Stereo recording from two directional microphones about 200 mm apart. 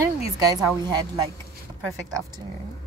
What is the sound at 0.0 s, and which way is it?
Speech, 15° right (ahead or behind).